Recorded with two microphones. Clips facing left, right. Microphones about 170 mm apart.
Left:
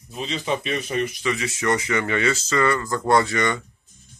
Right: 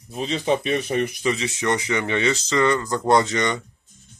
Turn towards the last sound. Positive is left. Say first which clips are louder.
# even
turn(degrees=-20)  # may be behind; listen again after turning